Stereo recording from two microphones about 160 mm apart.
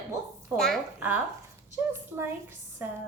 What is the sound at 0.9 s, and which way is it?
A woman's voice, 10° right (ahead or behind).